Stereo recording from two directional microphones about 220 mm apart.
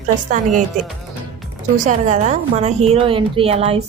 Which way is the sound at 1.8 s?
35° right (ahead or behind).